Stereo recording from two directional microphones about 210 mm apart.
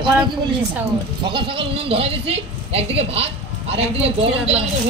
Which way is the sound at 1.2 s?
25° right (ahead or behind).